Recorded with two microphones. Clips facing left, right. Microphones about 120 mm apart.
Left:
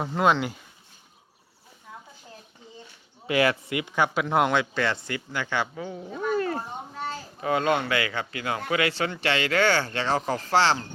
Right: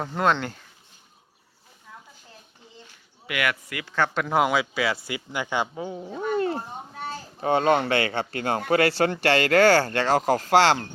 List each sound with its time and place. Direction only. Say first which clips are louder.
0.0 s speech: left 1 dB; 5° left (ahead or behind)
3.2 s speech: left 5 dB; 30° left (ahead or behind); by 6.1 s 25° right (ahead or behind)
6.3 s a sound: right 2 dB; 25° right (ahead or behind)
7.4 s speech: right 3 dB; 30° right (ahead or behind); by 10.8 s 45° right (ahead or behind)